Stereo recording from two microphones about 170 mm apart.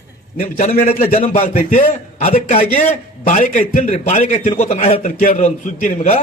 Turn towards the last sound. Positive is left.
turn(degrees=45)  # may be behind; listen again after turning